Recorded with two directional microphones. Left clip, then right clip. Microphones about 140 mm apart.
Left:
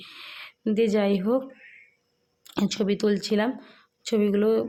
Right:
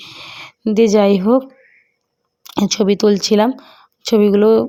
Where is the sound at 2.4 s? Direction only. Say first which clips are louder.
Right 11 dB; 35° right (ahead or behind).